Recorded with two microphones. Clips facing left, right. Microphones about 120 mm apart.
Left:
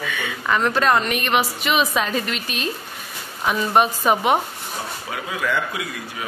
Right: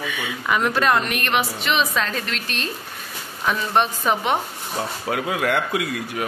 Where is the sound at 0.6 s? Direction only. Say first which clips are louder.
Left 1 dB; centre (ahead or behind).